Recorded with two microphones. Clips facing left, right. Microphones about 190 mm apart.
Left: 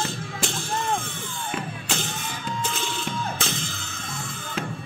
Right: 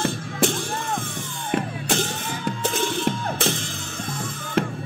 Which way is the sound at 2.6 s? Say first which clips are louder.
Right 7 dB; 60° right (ahead or behind).